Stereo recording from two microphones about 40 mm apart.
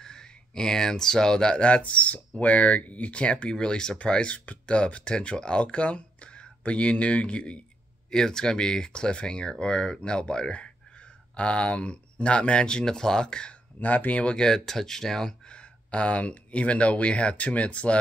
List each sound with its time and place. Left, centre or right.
0.0 s speech: centre
1.6 s speech: left
3.5 s speech: centre
8.1 s speech: centre
13.7 s speech: left
14.2 s speech: centre